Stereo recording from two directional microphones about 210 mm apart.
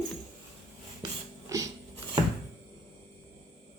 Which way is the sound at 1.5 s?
15° right (ahead or behind).